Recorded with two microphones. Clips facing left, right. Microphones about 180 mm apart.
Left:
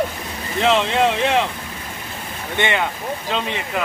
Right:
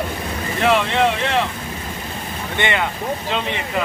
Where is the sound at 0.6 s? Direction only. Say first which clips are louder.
Even; 20° left (ahead or behind).